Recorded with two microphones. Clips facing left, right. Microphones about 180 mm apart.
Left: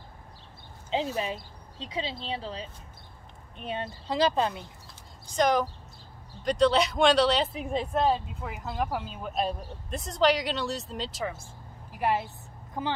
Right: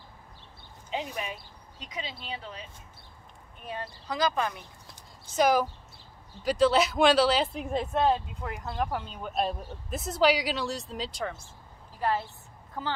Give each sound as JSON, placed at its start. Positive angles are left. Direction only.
{"t": 0.8, "sound": "speech", "side_deg": 30}
{"t": 5.3, "sound": "speech", "side_deg": -5}
{"t": 11.9, "sound": "a woman's voice", "side_deg": 15}